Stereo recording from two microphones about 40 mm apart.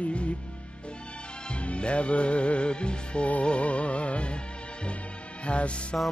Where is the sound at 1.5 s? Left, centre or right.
Left.